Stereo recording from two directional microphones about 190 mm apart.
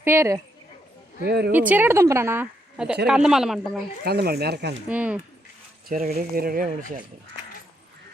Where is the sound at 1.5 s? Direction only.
10° right (ahead or behind).